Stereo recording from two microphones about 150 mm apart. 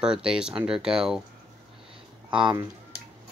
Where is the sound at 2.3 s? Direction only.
30° right (ahead or behind).